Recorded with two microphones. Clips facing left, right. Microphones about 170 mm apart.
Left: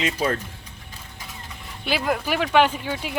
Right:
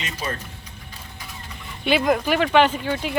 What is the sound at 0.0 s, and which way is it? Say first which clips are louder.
Speech: left 6 dB; 90° left.